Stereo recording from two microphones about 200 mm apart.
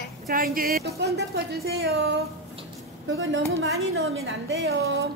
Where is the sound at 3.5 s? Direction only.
90° right.